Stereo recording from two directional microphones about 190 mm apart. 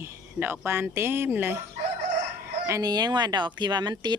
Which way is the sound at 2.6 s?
20° right (ahead or behind).